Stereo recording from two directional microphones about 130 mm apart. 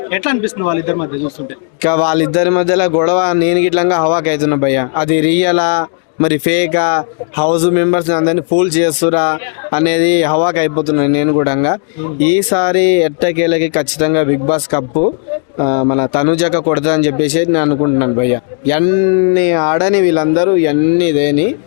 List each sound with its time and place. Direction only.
0.1 s a man's voice: 15° left (ahead or behind)
15.5 s speech: 25° left (ahead or behind)
16.3 s a man's voice: 10° left (ahead or behind)